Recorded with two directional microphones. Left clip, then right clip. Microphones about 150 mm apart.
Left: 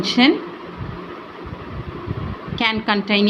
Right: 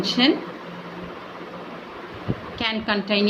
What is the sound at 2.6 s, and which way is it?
Speech, 45° left (ahead or behind).